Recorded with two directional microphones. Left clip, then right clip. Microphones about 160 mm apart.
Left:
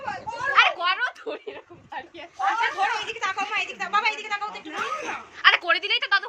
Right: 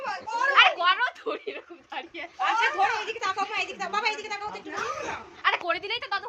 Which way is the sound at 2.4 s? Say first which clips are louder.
Even; 60° right (ahead or behind).